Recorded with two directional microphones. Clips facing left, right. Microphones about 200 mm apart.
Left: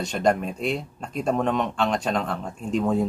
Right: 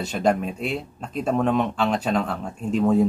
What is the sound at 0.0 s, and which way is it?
Speech, 5° right (ahead or behind).